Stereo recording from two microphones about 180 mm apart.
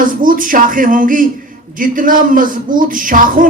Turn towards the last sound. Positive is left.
turn(degrees=-50)  # may be behind; listen again after turning